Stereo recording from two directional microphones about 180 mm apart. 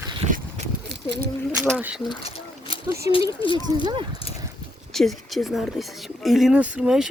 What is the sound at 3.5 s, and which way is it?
Speech, 25° right (ahead or behind).